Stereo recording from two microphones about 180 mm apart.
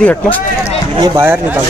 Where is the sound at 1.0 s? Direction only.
15° right (ahead or behind).